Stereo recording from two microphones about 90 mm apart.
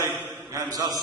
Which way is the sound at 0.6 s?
45° right (ahead or behind).